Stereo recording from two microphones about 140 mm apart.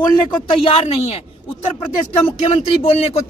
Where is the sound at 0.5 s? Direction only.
40° left (ahead or behind).